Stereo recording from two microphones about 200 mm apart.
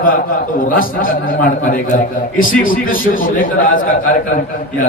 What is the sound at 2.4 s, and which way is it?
Speech, 45° left (ahead or behind).